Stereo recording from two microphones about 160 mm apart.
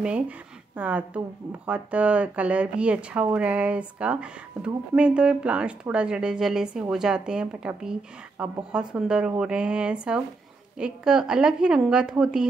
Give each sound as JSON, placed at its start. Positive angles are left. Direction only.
{"t": 0.0, "sound": "a woman's voice", "side_deg": -10}